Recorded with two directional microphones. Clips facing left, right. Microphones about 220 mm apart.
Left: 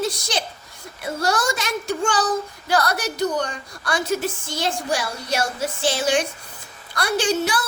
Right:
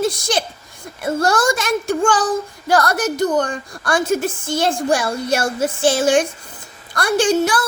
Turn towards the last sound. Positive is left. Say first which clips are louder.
# right 6 dB
turn(degrees=-50)  # may be behind; listen again after turning